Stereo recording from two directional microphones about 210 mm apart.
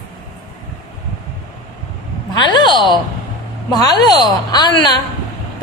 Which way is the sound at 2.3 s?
20° left (ahead or behind).